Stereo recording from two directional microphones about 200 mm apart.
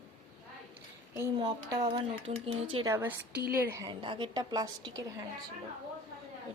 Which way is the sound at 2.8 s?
10° right (ahead or behind).